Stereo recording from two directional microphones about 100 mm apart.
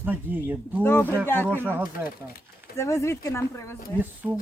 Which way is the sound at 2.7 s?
30° left (ahead or behind).